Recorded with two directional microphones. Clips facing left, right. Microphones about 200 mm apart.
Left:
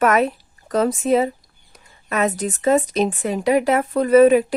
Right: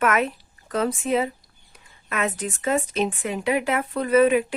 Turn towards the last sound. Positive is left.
turn(degrees=40)  # may be behind; listen again after turning